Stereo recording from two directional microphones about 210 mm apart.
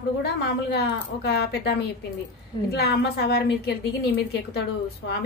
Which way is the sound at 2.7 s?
50° left (ahead or behind).